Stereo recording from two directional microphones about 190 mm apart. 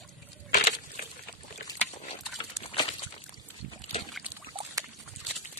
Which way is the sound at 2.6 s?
30° left (ahead or behind).